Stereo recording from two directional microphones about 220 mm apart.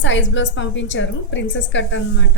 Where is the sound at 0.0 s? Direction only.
55° left (ahead or behind).